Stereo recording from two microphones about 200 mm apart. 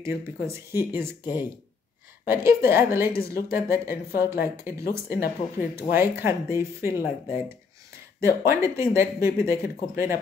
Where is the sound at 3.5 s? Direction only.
15° right (ahead or behind).